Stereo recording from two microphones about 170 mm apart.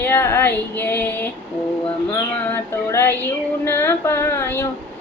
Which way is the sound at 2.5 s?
15° left (ahead or behind).